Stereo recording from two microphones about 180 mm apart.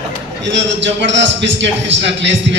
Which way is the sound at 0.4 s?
85° right.